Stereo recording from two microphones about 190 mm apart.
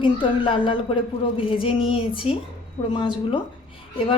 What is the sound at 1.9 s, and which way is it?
Speech, 30° left (ahead or behind).